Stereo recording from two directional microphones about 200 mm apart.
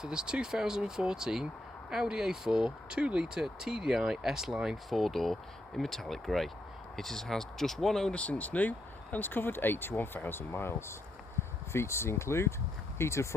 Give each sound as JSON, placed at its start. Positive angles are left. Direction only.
{"t": 0.0, "sound": "speech", "side_deg": -5}